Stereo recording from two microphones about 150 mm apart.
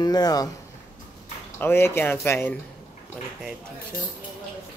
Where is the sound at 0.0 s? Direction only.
25° left (ahead or behind).